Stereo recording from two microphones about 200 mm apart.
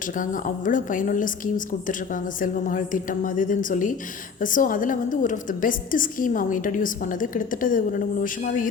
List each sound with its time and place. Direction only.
0.0 s a woman's voice: 40° left (ahead or behind)